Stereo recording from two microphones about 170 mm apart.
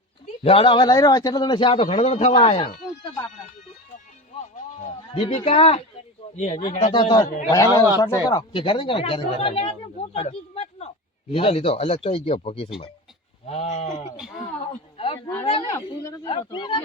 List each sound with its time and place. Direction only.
0.4 s a man's voice: 30° left (ahead or behind)
4.8 s a man's voice: 40° left (ahead or behind)
6.7 s a man's voice: 30° left (ahead or behind)
14.9 s a sound: 35° left (ahead or behind)
16.2 s speech: 30° left (ahead or behind)